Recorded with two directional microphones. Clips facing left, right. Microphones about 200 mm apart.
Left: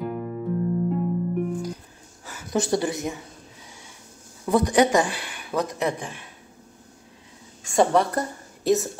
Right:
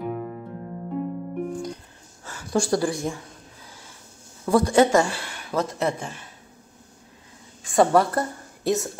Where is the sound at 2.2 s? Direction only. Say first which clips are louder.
Right 1 dB; 20° left (ahead or behind).